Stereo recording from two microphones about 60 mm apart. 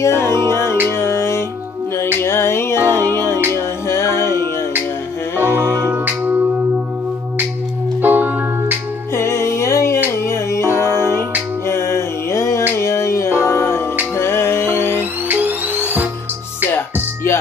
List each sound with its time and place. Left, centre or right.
0.0 s music: left
5.4 s music: right
8.0 s music: right
9.1 s music: left
15.0 s music: right
16.7 s music: left